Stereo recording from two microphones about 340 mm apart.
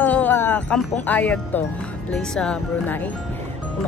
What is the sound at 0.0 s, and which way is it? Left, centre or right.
Music, centre.